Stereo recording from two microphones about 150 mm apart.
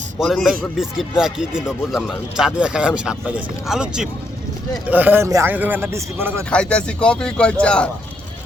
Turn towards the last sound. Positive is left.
turn(degrees=5)  # may be behind; listen again after turning